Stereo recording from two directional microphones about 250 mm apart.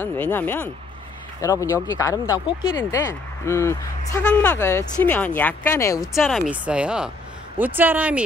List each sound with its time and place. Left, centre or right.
0.0 s speech: centre